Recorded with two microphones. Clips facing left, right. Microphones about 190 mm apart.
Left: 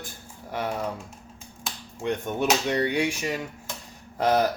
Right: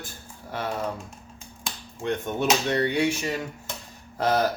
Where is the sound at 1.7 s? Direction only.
5° left (ahead or behind).